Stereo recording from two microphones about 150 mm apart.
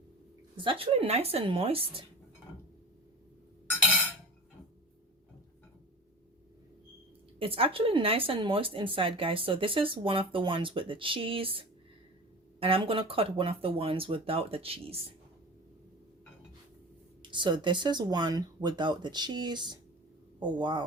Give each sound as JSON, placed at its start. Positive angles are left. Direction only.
{"t": 0.5, "sound": "speech", "side_deg": -35}
{"t": 7.3, "sound": "speech", "side_deg": -40}
{"t": 17.2, "sound": "speech", "side_deg": -30}